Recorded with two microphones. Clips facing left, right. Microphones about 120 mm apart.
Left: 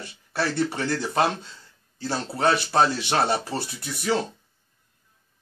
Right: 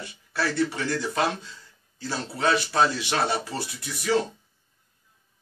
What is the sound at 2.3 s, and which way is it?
Speech, 50° left (ahead or behind).